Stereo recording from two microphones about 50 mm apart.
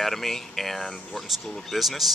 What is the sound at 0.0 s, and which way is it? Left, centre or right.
Speech, centre.